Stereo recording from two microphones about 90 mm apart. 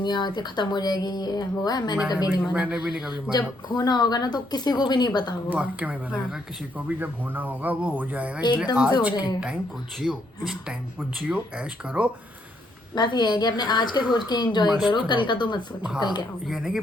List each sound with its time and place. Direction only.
0.0 s speech: 55° left (ahead or behind)
2.1 s speech: 20° right (ahead or behind)
3.1 s speech: 50° left (ahead or behind)
5.5 s speech: 15° right (ahead or behind)
12.9 s a woman's voice: 55° left (ahead or behind)
16.5 s speech: 5° right (ahead or behind)